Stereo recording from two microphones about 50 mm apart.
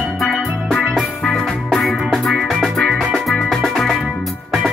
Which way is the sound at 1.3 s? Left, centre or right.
Centre.